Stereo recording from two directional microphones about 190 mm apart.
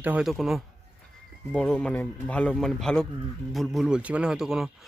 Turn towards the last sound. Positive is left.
turn(degrees=-5)  # may be behind; listen again after turning